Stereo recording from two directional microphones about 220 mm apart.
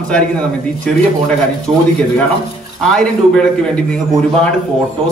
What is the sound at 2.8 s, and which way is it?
A man's voice, 5° left (ahead or behind).